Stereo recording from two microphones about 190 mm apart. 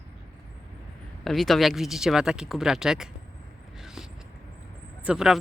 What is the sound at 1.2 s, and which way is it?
Speech, centre (ahead or behind).